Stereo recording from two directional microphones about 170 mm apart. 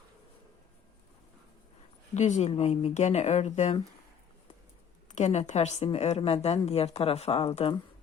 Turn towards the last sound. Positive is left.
turn(degrees=35)  # may be behind; listen again after turning